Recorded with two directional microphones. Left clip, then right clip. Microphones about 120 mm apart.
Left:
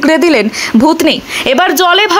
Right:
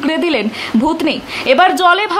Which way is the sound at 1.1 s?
40° left (ahead or behind).